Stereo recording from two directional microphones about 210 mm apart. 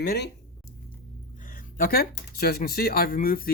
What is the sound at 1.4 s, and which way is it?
Speech, 40° left (ahead or behind).